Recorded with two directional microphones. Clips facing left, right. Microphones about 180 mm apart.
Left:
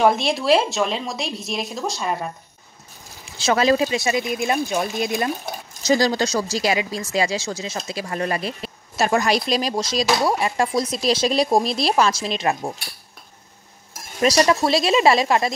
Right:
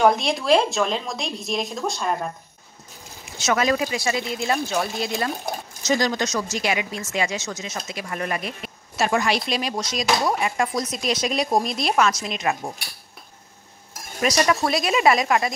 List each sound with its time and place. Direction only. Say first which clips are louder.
0.0 s speech: left 1 dB; centre (ahead or behind)
3.3 s speech: left 4 dB; 30° left (ahead or behind)
5.9 s speech: left 4 dB; 30° left (ahead or behind)
14.2 s speech: left 3 dB; 30° left (ahead or behind)